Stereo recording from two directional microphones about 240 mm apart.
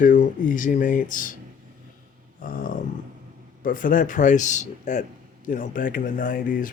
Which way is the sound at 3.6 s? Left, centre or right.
Left.